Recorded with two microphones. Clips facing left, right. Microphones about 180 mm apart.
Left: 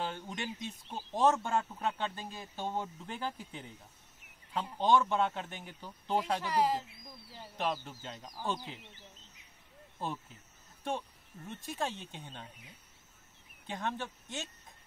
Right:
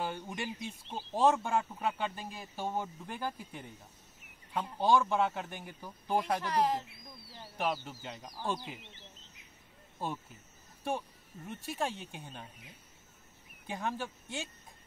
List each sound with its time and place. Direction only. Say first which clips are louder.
0.0 s speech: right 1 dB; 10° right (ahead or behind)
4.7 s speech: even; 10° right (ahead or behind)
6.4 s speech: even; 5° left (ahead or behind)
7.5 s speech: right 1 dB; 10° right (ahead or behind)
9.9 s speech: right 1 dB; 10° right (ahead or behind)
13.7 s speech: right 1 dB; 10° right (ahead or behind)